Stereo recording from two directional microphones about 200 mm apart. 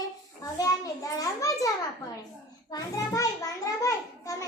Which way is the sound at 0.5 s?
15° left (ahead or behind).